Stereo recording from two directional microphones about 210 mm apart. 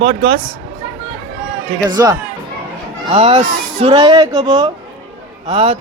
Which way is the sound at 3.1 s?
30° right (ahead or behind).